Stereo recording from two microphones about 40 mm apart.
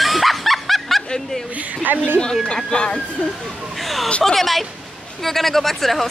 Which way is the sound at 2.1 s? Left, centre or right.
Centre.